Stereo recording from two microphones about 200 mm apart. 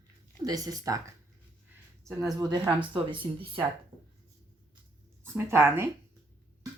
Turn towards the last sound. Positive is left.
turn(degrees=-10)  # may be behind; listen again after turning